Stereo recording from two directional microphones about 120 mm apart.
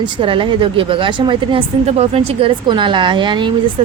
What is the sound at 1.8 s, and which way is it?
Speech, 55° right (ahead or behind).